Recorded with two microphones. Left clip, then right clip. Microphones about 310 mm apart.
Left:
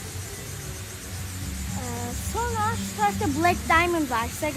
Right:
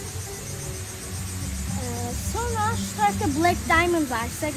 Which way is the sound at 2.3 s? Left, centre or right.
Centre.